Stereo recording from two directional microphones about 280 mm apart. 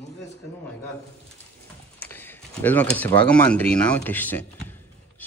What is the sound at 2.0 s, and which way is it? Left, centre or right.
Speech, centre.